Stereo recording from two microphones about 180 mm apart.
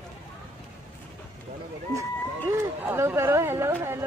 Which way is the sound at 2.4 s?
15° right (ahead or behind).